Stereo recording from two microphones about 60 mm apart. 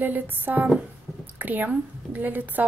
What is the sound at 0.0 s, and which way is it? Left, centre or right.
A woman's voice, right.